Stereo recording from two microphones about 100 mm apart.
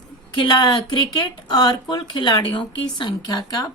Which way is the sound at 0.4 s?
45° left (ahead or behind).